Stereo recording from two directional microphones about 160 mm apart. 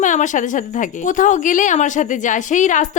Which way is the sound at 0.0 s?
50° left (ahead or behind).